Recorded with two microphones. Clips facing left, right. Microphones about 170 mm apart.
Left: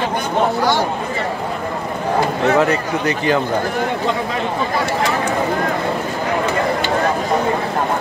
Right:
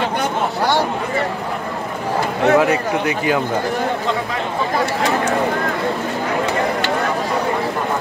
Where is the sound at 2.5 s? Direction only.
10° right (ahead or behind).